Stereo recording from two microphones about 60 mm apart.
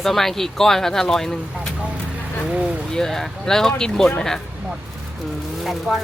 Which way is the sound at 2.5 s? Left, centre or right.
Centre.